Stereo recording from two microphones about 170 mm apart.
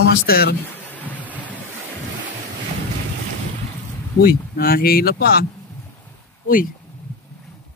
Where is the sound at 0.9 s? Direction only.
10° left (ahead or behind).